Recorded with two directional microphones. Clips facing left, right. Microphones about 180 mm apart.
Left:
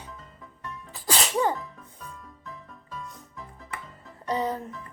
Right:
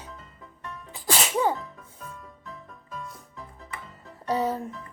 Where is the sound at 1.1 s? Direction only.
10° right (ahead or behind).